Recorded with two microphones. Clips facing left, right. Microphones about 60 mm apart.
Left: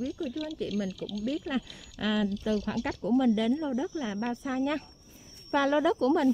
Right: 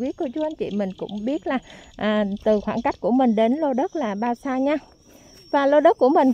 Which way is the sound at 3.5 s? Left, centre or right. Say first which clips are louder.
Right 9 dB; right.